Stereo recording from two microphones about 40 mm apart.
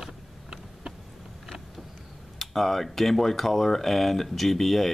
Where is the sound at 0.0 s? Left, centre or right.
Centre.